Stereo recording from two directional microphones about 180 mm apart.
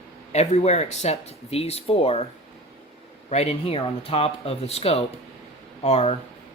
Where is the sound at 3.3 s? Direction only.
35° left (ahead or behind).